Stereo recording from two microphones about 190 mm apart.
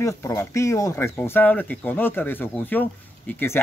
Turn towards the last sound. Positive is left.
turn(degrees=10)  # may be behind; listen again after turning